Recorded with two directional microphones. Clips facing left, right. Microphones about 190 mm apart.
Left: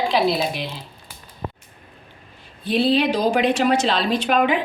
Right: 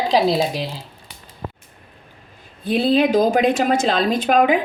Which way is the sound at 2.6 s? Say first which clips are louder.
Right 2 dB; 50° right (ahead or behind).